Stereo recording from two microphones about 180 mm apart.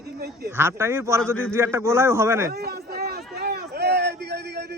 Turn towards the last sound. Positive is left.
turn(degrees=-65)  # may be behind; listen again after turning